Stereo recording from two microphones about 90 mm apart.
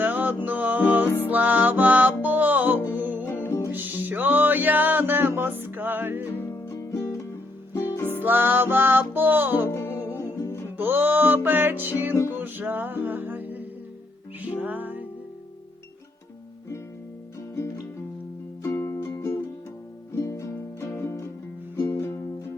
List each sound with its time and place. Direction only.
0.0 s music: 20° right (ahead or behind)
3.2 s music: 25° left (ahead or behind)
3.7 s music: 20° right (ahead or behind)
6.3 s music: 25° left (ahead or behind)
8.2 s music: 20° right (ahead or behind)
9.6 s music: 30° left (ahead or behind)
10.8 s music: 25° right (ahead or behind)
18.6 s music: 35° left (ahead or behind)
20.1 s music: 35° left (ahead or behind)